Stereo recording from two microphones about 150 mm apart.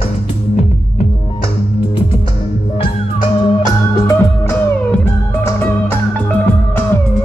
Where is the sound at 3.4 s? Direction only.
25° left (ahead or behind).